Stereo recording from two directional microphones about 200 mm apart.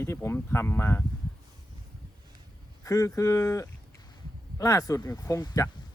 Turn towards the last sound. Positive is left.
turn(degrees=15)  # may be behind; listen again after turning